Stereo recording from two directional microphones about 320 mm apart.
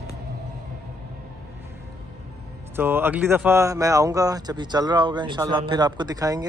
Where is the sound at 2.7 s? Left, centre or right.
Centre.